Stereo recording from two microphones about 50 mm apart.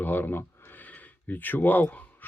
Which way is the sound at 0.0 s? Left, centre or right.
Left.